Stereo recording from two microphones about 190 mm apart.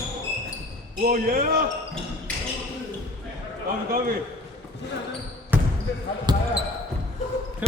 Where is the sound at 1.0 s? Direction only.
45° right (ahead or behind).